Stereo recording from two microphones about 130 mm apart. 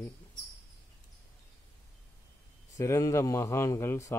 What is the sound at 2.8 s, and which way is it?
Speech, 20° left (ahead or behind).